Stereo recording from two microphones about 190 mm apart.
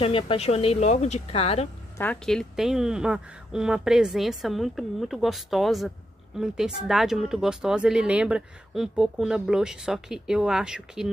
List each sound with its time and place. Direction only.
0.0 s a woman's voice: 30° left (ahead or behind)
2.0 s speech: 5° left (ahead or behind)